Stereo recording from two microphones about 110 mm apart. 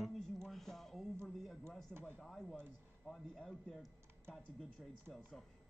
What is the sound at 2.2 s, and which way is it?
A man's voice, 5° left (ahead or behind).